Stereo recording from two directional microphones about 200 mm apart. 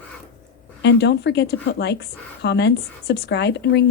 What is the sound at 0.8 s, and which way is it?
Speech, 60° left (ahead or behind).